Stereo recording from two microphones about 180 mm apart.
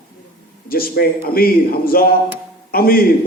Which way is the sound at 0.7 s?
55° left (ahead or behind).